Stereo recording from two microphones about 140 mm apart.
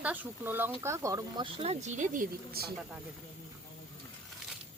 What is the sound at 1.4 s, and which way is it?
Speech, 45° right (ahead or behind).